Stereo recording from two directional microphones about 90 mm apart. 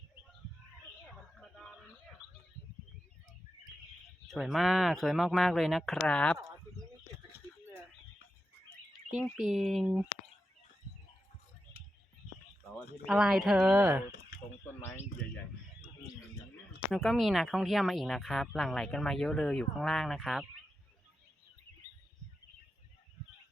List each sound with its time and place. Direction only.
1.4 s a sound: 10° left (ahead or behind)
4.3 s speech: centre (ahead or behind)
6.0 s speech: 10° left (ahead or behind)
9.3 s speech: 5° right (ahead or behind)
13.1 s speech: 5° right (ahead or behind)
13.8 s speech: 20° right (ahead or behind)
14.8 s speech: 25° left (ahead or behind)
16.9 s speech: centre (ahead or behind)